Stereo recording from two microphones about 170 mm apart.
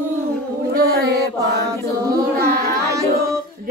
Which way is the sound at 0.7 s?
70° right (ahead or behind).